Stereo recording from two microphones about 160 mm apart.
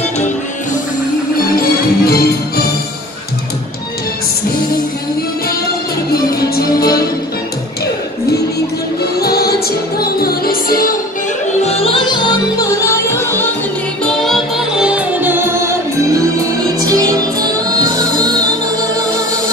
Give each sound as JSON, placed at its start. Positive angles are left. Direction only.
{"t": 1.6, "sound": "music", "side_deg": 70}
{"t": 6.5, "sound": "music", "side_deg": 75}
{"t": 9.2, "sound": "music", "side_deg": 75}
{"t": 11.6, "sound": "music", "side_deg": 40}
{"t": 14.0, "sound": "music", "side_deg": 0}
{"t": 16.9, "sound": "music", "side_deg": -25}